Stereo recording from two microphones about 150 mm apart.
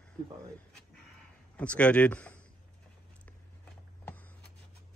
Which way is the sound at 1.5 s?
10° left (ahead or behind).